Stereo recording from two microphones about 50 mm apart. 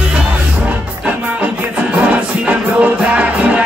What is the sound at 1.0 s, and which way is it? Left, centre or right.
Music, right.